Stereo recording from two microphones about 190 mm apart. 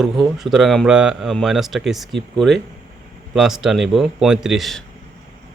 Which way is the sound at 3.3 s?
Centre (ahead or behind).